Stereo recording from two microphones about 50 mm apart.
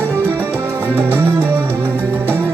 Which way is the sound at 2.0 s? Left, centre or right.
Right.